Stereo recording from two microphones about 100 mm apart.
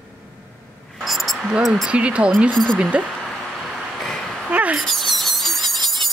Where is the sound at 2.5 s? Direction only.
5° left (ahead or behind).